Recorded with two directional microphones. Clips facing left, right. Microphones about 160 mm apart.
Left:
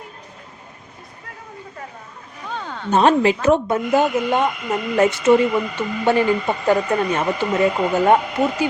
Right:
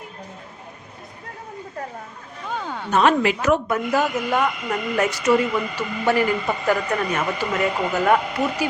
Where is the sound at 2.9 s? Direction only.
30° left (ahead or behind).